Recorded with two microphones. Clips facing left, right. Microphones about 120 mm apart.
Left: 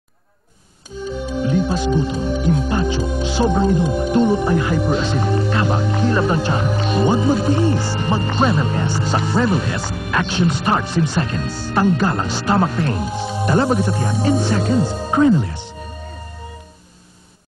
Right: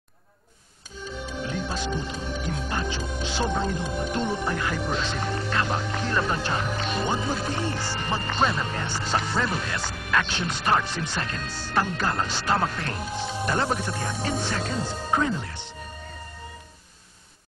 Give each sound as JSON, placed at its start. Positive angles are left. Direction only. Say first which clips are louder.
{"t": 1.0, "sound": "speech", "louder": "left 10 dB", "side_deg": 10}